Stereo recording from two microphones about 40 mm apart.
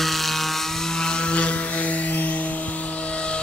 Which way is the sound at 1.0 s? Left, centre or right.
Centre.